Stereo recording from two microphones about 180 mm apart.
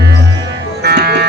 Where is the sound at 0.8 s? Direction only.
65° right (ahead or behind).